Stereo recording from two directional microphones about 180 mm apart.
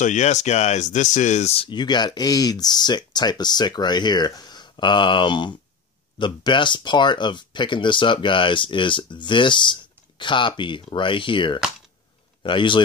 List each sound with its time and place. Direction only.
0.0 s speech: 40° left (ahead or behind)